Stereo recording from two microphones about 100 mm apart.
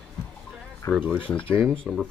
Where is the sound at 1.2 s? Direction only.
10° left (ahead or behind).